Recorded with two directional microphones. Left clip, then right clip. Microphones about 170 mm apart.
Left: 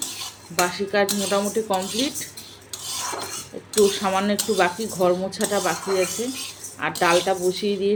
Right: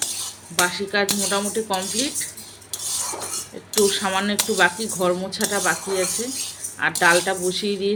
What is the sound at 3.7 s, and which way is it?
Speech, 10° left (ahead or behind).